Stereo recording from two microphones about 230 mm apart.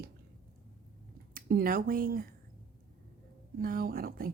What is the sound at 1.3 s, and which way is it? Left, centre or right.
Speech, right.